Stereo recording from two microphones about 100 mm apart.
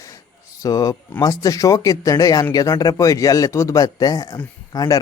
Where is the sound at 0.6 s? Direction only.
40° left (ahead or behind).